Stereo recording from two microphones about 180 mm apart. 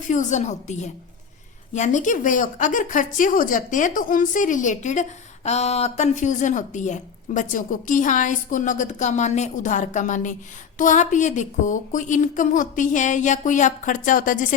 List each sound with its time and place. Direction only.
0.1 s a woman's voice: 40° left (ahead or behind)